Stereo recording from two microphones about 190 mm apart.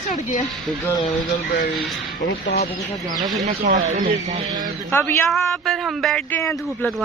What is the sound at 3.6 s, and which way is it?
Speech, 45° right (ahead or behind).